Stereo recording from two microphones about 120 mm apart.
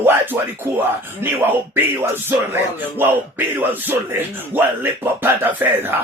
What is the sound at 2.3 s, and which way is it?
Speech, 15° right (ahead or behind).